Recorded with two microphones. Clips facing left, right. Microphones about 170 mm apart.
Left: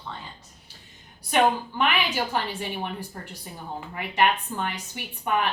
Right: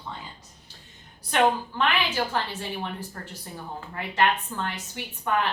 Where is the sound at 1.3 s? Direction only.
15° left (ahead or behind).